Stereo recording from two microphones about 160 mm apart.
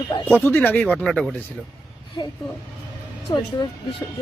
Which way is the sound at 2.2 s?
25° left (ahead or behind).